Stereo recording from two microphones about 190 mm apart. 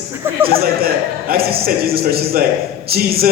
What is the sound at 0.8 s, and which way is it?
Speech, 50° right (ahead or behind).